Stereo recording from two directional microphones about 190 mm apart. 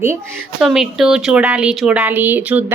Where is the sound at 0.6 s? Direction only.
Centre (ahead or behind).